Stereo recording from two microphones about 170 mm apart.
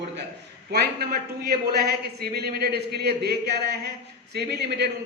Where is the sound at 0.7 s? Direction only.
70° right (ahead or behind).